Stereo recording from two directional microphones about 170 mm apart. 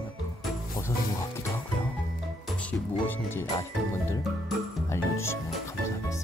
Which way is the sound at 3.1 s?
15° left (ahead or behind).